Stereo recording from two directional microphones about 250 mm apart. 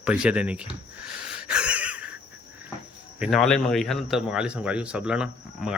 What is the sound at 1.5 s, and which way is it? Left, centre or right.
Wheeze, centre.